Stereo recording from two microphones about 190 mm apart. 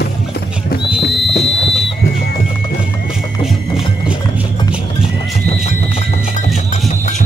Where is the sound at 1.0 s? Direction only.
65° left (ahead or behind).